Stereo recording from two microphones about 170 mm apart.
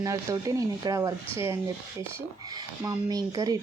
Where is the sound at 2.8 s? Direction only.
20° right (ahead or behind).